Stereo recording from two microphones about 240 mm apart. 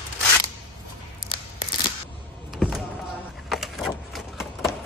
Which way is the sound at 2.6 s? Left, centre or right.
Centre.